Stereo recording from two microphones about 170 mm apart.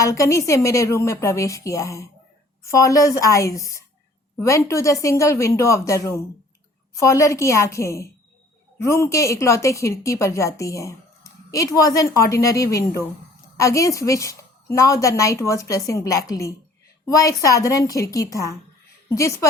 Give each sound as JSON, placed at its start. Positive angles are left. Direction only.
{"t": 0.0, "sound": "a woman's voice", "side_deg": 15}